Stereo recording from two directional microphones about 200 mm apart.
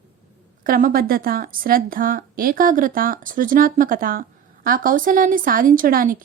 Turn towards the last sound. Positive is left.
turn(degrees=-45)  # may be behind; listen again after turning